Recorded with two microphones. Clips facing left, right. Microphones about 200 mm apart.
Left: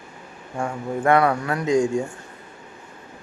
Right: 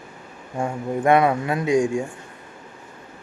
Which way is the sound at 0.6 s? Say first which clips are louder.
Right 1 dB; 20° right (ahead or behind).